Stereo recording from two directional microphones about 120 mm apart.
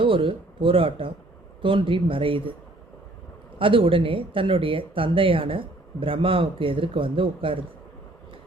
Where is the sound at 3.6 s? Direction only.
45° right (ahead or behind).